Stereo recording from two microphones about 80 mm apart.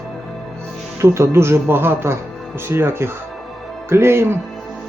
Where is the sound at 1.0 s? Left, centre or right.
Right.